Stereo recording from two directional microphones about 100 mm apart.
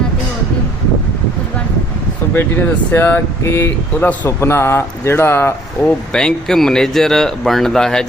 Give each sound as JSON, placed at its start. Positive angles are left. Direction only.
{"t": 2.3, "sound": "speech", "side_deg": 20}
{"t": 6.1, "sound": "speech", "side_deg": 5}